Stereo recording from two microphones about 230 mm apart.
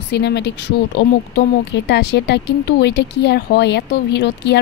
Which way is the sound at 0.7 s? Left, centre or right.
Left.